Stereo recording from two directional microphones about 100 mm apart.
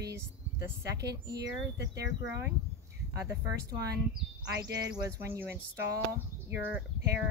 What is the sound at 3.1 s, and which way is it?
Speech, 35° right (ahead or behind).